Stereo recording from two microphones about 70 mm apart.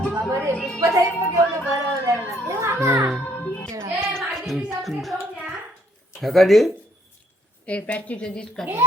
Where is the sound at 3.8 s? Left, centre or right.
Right.